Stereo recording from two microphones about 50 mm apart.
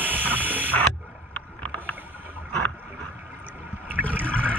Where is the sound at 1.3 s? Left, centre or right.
Left.